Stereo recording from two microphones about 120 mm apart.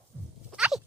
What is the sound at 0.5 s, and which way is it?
Dog, 5° right (ahead or behind).